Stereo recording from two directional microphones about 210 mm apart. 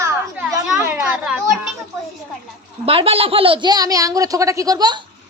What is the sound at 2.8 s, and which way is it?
A child's voice, 25° right (ahead or behind).